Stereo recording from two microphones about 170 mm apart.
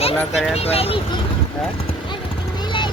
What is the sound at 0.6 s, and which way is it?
Speech, 35° left (ahead or behind).